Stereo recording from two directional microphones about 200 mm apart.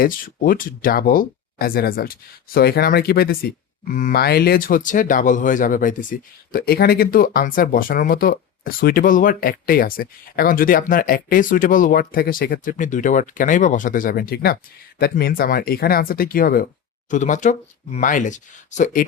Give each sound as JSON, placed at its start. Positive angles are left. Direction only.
{"t": 0.0, "sound": "speech", "side_deg": 45}